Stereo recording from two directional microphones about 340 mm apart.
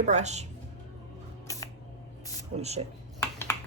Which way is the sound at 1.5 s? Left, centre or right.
Centre.